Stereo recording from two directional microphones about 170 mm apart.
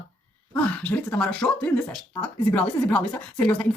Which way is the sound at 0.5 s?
10° left (ahead or behind).